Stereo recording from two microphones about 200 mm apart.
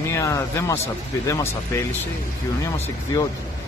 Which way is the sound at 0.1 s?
15° left (ahead or behind).